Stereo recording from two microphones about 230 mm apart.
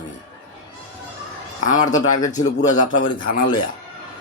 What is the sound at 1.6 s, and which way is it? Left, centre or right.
A man's voice, left.